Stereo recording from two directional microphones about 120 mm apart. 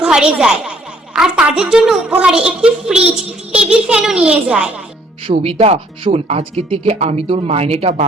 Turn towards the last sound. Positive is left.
turn(degrees=-55)  # may be behind; listen again after turning